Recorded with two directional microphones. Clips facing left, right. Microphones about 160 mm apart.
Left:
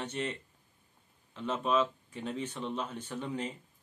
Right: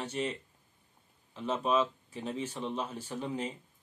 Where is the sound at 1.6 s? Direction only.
5° right (ahead or behind).